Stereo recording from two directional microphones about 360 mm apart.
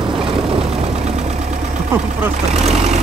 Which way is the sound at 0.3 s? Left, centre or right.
Centre.